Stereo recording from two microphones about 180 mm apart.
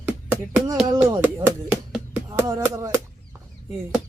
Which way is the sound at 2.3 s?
15° right (ahead or behind).